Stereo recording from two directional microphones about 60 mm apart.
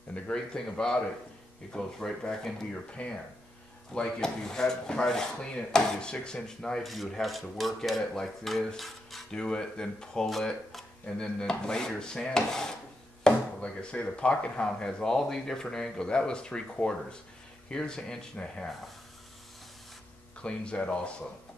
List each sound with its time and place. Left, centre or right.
0.1 s speech: centre
6.8 s speech: centre
9.3 s speech: centre
13.3 s speech: centre
20.3 s speech: centre